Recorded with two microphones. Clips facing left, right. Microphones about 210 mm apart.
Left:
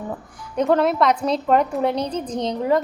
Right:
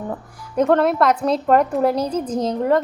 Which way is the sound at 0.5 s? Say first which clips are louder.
Right 2 dB; centre (ahead or behind).